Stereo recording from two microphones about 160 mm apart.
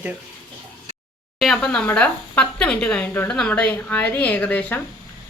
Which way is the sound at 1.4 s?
5° left (ahead or behind).